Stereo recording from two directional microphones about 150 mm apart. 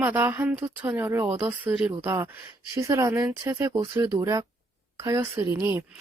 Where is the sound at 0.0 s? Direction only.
15° right (ahead or behind).